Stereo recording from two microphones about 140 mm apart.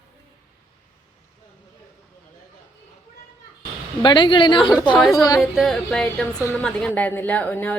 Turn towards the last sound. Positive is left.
turn(degrees=10)  # may be behind; listen again after turning